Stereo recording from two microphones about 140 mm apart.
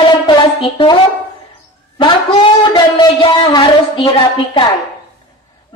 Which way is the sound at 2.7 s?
35° left (ahead or behind).